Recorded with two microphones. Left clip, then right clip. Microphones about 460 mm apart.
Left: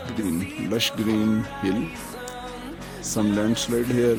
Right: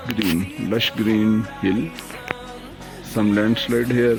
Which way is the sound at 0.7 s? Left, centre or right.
Left.